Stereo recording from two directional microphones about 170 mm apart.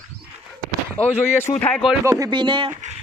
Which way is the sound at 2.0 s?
20° right (ahead or behind).